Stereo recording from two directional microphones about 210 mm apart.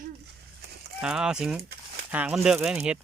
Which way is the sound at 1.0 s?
5° right (ahead or behind).